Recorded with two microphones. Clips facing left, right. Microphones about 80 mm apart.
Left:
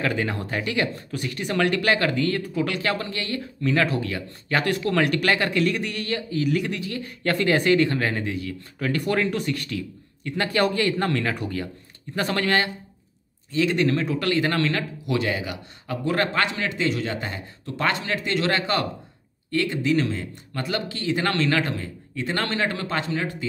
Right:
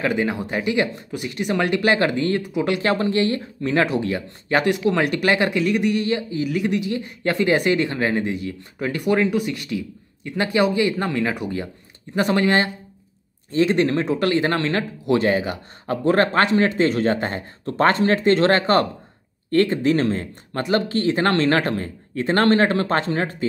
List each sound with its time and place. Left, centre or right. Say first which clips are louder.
0.0 s speech: right 4 dB; centre
2.8 s speech: right 8 dB; right
4.7 s speech: right 2 dB; centre
6.4 s speech: left 2 dB; centre
6.7 s speech: right 7 dB; centre
13.5 s speech: right 3 dB; right